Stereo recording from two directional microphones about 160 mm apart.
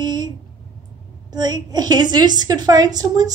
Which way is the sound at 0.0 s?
25° right (ahead or behind).